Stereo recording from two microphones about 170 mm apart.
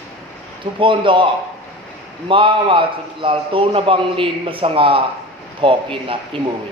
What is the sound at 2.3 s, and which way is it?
A man's voice, 30° right (ahead or behind).